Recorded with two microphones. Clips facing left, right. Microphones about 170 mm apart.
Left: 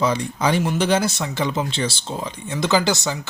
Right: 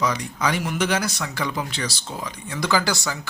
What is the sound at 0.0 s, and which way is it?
Speech, 30° left (ahead or behind).